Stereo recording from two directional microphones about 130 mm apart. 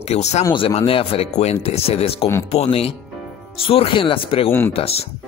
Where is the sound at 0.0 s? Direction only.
55° left (ahead or behind).